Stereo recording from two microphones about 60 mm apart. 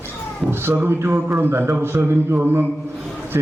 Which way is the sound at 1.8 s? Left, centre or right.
Right.